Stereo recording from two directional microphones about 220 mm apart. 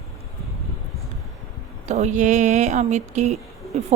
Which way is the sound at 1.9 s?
30° right (ahead or behind).